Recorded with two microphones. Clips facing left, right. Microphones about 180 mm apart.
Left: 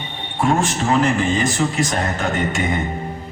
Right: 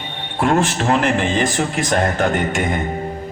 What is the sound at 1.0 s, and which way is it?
Speech, 65° right (ahead or behind).